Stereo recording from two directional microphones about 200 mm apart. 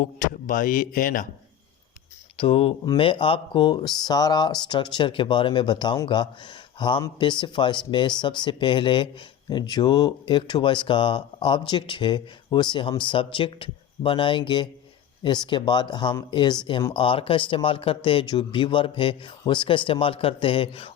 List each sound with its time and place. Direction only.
0.0 s speech: 40° left (ahead or behind)
2.4 s speech: 30° left (ahead or behind)